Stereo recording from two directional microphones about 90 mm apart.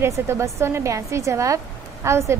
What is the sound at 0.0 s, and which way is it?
A woman's voice, 30° right (ahead or behind).